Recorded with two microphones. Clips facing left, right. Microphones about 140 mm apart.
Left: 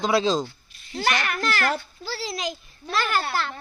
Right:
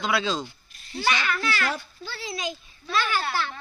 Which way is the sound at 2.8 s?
45° left (ahead or behind).